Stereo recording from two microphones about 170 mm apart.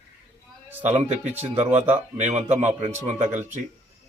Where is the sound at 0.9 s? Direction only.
40° right (ahead or behind).